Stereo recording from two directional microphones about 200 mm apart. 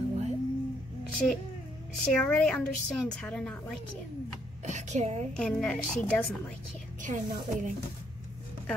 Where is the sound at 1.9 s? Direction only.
5° left (ahead or behind).